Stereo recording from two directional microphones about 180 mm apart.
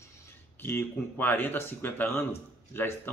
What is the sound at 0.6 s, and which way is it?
Speech, 10° left (ahead or behind).